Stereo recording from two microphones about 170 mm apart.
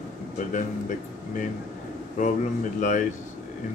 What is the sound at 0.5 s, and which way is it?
Speech, 50° left (ahead or behind).